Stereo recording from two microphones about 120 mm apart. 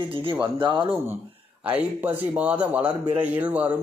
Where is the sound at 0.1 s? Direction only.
50° right (ahead or behind).